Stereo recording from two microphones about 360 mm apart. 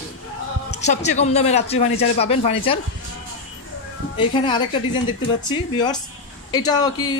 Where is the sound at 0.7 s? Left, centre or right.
Centre.